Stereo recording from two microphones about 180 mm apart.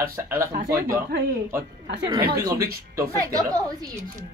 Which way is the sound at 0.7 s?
55° right (ahead or behind).